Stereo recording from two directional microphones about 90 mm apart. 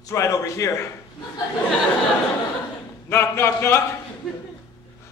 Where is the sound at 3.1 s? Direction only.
30° left (ahead or behind).